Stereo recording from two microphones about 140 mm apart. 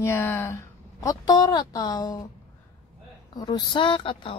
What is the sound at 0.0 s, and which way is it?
Speech, 20° left (ahead or behind).